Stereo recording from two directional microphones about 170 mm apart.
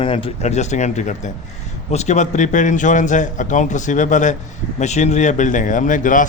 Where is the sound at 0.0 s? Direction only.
35° left (ahead or behind).